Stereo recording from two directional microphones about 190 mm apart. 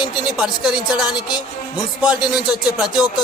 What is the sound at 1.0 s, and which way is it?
Music, 20° left (ahead or behind).